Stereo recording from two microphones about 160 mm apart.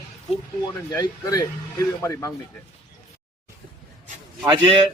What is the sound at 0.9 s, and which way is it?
Speech, 20° left (ahead or behind).